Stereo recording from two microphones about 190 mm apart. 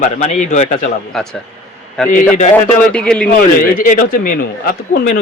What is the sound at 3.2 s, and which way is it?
Speech, 50° left (ahead or behind).